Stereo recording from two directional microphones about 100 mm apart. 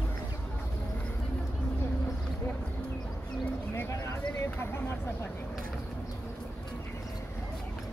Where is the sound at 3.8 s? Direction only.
30° left (ahead or behind).